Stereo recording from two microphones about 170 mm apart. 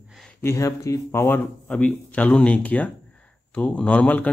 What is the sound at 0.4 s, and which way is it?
Speech, 15° left (ahead or behind).